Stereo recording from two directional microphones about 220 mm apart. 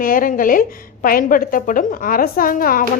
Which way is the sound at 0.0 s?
40° left (ahead or behind).